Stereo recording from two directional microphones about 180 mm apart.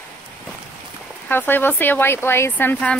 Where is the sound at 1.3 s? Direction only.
10° left (ahead or behind).